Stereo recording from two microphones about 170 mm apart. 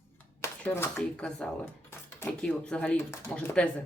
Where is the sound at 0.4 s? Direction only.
10° left (ahead or behind).